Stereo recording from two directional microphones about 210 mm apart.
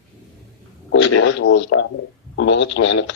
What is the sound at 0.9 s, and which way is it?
Speech, 70° left (ahead or behind).